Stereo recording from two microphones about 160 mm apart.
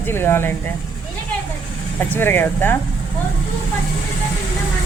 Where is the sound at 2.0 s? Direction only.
10° left (ahead or behind).